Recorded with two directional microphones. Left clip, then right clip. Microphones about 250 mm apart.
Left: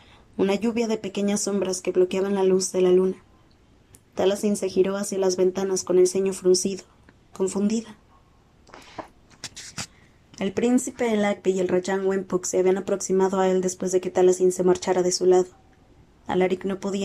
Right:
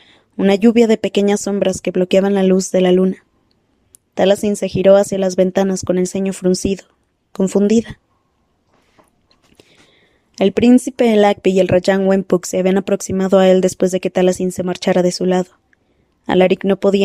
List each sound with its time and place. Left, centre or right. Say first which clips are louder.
0.0 s speech: right 7 dB; right
10.3 s speech: right 11 dB; right